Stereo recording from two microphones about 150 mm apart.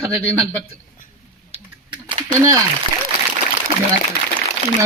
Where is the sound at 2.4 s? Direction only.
20° right (ahead or behind).